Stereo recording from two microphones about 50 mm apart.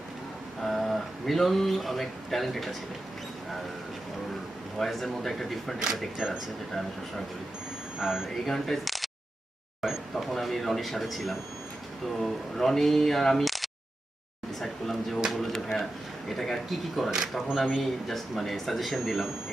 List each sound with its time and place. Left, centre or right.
0.6 s speech: centre
4.8 s speech: centre
6.1 s speech: centre
7.9 s speech: centre
8.4 s speech: centre
9.8 s a sound: centre
12.2 s speech: centre